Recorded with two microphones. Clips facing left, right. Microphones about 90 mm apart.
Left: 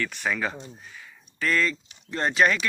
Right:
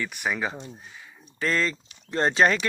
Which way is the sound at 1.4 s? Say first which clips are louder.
Left 1 dB; 30° right (ahead or behind).